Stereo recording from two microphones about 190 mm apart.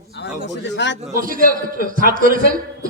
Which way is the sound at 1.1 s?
45° right (ahead or behind).